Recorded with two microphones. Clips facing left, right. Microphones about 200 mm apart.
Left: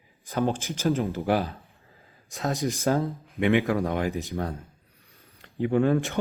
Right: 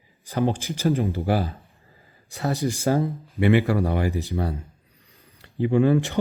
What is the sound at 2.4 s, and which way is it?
Speech, 10° right (ahead or behind).